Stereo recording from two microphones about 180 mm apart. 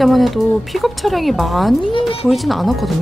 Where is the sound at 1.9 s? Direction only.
30° left (ahead or behind).